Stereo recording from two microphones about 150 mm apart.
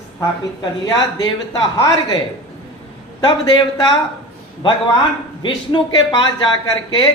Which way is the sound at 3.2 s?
30° left (ahead or behind).